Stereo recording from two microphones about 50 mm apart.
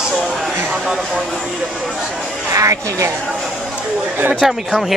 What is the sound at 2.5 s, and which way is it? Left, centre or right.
Speech, right.